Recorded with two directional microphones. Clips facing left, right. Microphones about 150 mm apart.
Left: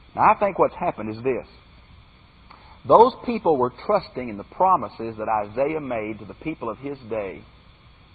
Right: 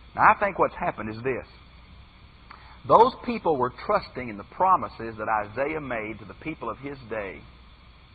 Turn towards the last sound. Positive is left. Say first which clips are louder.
# left 5 dB
turn(degrees=25)  # may be behind; listen again after turning